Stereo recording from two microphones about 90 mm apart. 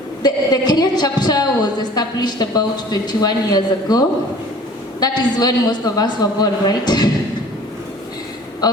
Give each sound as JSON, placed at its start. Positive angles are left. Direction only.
{"t": 0.2, "sound": "a woman's voice", "side_deg": 50}
{"t": 8.6, "sound": "a woman's voice", "side_deg": 50}